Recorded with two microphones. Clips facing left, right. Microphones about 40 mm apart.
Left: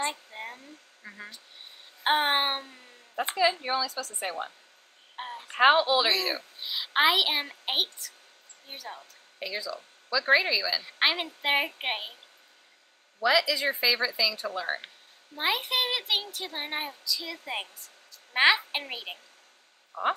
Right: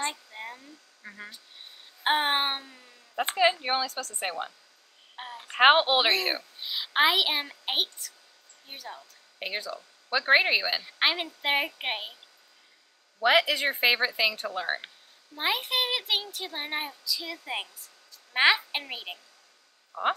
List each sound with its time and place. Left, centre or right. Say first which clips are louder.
0.3 s a sound: left 1 dB; centre
2.0 s a child's voice: left 1 dB; centre
2.6 s speech: left 1 dB; left
3.2 s speech: right 2 dB; right
5.1 s a sound: left 2 dB; centre
5.6 s speech: right 1 dB; right
6.6 s a child's voice: even; centre
8.7 s speech: left 1 dB; centre
9.4 s speech: even; right
11.0 s a child's voice: left 1 dB; centre
13.2 s speech: right 2 dB; right
15.3 s a child's voice: even; centre
18.3 s a child's voice: even; centre